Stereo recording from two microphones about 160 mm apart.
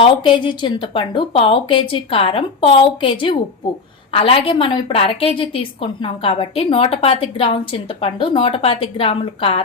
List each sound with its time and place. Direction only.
0.0 s a woman's voice: 30° left (ahead or behind)